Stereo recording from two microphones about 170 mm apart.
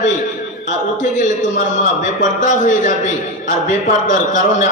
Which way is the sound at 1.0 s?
45° left (ahead or behind).